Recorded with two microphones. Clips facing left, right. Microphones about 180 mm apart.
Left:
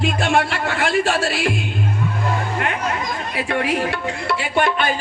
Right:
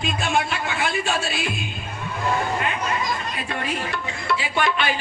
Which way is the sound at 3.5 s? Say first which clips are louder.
Left 8 dB; 80° left.